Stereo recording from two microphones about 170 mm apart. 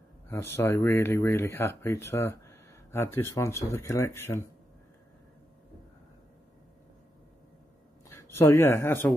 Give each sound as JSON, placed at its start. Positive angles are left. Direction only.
{"t": 0.3, "sound": "speech", "side_deg": 15}
{"t": 8.1, "sound": "speech", "side_deg": 15}